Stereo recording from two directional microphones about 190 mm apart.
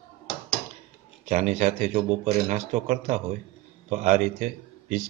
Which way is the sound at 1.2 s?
35° right (ahead or behind).